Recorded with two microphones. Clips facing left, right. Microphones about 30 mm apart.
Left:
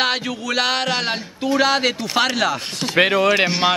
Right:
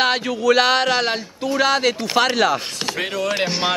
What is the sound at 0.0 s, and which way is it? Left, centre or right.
A man's voice, centre.